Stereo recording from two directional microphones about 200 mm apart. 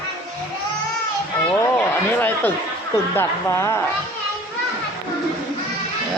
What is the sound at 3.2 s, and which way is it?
Speech, 15° left (ahead or behind).